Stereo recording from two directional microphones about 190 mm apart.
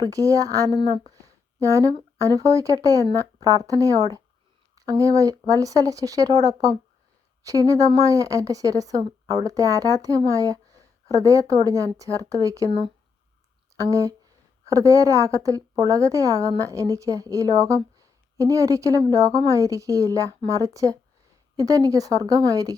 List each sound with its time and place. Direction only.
0.0 s speech: 20° right (ahead or behind)